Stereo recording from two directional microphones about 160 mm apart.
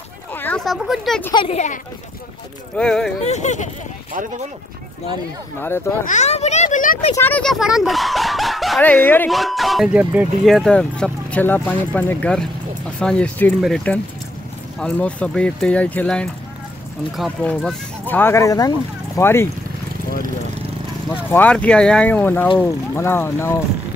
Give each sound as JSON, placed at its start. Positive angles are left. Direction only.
{"t": 0.3, "sound": "a sound", "side_deg": 10}
{"t": 1.3, "sound": "speech", "side_deg": 30}
{"t": 2.8, "sound": "speech", "side_deg": 5}
{"t": 3.3, "sound": "speech", "side_deg": 45}
{"t": 6.0, "sound": "a child's voice", "side_deg": 45}
{"t": 7.2, "sound": "speech", "side_deg": 10}
{"t": 8.8, "sound": "speech", "side_deg": 10}
{"t": 9.3, "sound": "speech", "side_deg": 0}
{"t": 21.3, "sound": "speech", "side_deg": 10}